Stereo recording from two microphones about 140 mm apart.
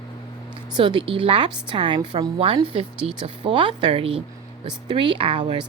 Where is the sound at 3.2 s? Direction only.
35° right (ahead or behind).